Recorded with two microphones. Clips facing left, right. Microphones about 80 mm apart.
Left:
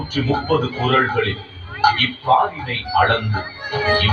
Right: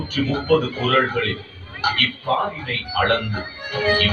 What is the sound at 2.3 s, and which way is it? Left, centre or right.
Speech, left.